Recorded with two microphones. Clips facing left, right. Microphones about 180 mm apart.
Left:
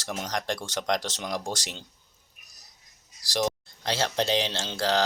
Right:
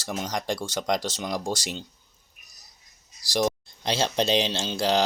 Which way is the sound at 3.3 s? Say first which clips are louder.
Right 3 dB; 10° right (ahead or behind).